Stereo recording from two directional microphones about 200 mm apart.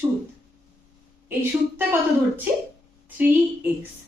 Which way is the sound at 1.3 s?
10° right (ahead or behind).